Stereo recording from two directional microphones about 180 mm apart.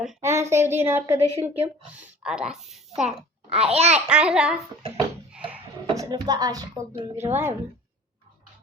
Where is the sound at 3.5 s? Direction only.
35° right (ahead or behind).